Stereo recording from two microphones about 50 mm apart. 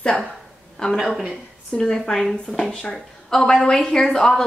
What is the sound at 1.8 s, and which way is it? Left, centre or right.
Speech, centre.